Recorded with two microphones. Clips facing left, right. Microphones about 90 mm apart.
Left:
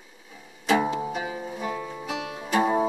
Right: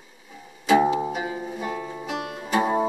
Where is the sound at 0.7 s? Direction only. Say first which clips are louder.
Right 4 dB; 10° right (ahead or behind).